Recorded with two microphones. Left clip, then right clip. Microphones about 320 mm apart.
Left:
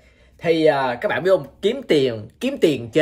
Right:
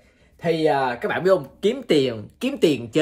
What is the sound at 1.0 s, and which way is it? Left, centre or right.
Speech, centre.